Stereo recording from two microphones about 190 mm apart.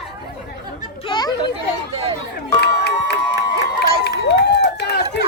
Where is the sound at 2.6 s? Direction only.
60° left (ahead or behind).